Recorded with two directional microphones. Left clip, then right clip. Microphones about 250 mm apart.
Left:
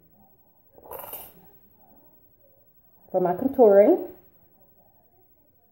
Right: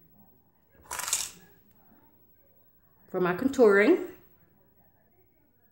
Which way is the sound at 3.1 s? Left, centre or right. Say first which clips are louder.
Left 4 dB; right.